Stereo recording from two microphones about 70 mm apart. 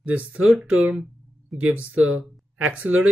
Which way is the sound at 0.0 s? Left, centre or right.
Right.